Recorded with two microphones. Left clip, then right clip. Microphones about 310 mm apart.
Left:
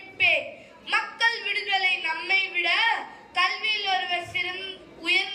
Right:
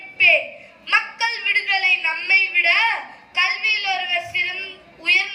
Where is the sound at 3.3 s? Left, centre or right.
Centre.